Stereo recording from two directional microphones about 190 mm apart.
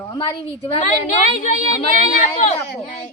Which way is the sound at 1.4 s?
40° left (ahead or behind).